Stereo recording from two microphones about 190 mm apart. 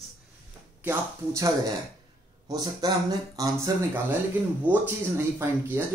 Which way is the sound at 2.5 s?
20° right (ahead or behind).